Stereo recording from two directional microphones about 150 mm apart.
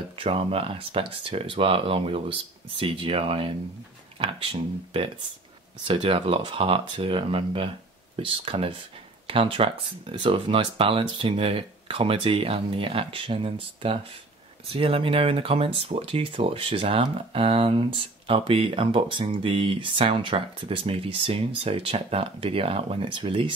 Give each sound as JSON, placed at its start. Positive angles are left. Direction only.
{"t": 0.2, "sound": "speech", "side_deg": -40}